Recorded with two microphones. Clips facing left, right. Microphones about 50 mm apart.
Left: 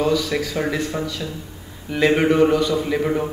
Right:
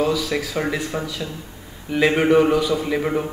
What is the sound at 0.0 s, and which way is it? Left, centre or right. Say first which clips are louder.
A man's voice: left 1 dB; centre.